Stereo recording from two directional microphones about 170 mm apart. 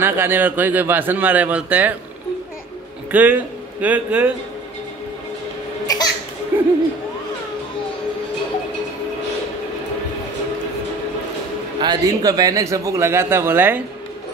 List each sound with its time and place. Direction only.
0.0 s a man's voice: 10° right (ahead or behind)
3.1 s a man's voice: 10° right (ahead or behind)
6.5 s a sound: 15° right (ahead or behind)
11.8 s a man's voice: 25° right (ahead or behind)